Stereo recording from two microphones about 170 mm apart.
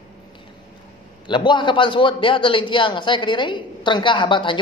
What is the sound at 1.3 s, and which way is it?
A man's voice, 30° left (ahead or behind).